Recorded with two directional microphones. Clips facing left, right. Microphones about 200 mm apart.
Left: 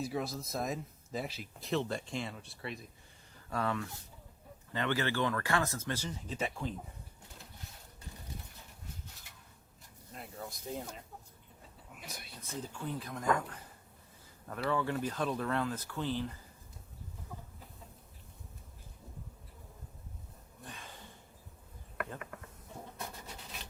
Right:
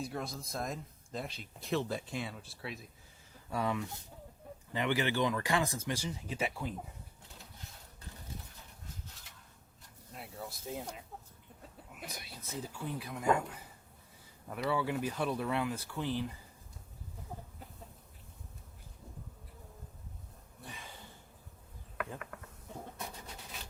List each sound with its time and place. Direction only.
0.0 s speech: centre (ahead or behind)
3.5 s speech: 15° right (ahead or behind)
10.1 s a sound: centre (ahead or behind)
11.9 s speech: 55° right (ahead or behind)
12.6 s speech: 10° right (ahead or behind)
20.7 s a sound: 10° right (ahead or behind)
23.2 s scratch: centre (ahead or behind)